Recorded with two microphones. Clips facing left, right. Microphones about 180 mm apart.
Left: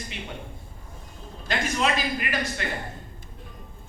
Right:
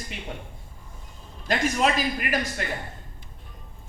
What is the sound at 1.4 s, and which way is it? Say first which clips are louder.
A man's voice: right 3 dB; 45° right (ahead or behind).